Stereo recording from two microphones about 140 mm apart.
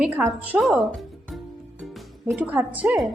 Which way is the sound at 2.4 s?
10° right (ahead or behind).